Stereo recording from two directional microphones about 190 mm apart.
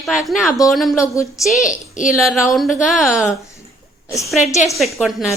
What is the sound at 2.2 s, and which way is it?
A woman's voice, centre (ahead or behind).